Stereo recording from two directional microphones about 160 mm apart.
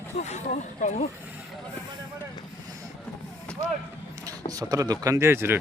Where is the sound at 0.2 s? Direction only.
45° left (ahead or behind).